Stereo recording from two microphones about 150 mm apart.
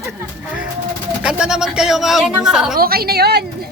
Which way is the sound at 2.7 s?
85° right.